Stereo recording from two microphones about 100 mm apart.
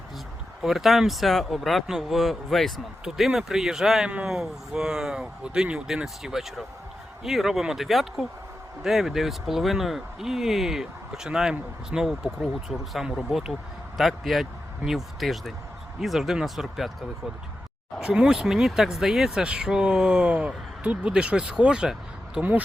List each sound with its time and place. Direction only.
0.6 s speech: 5° right (ahead or behind)
18.0 s speech: 5° right (ahead or behind)